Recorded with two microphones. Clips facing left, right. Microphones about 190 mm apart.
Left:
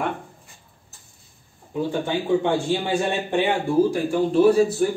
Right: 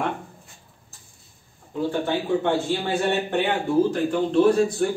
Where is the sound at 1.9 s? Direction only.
15° left (ahead or behind).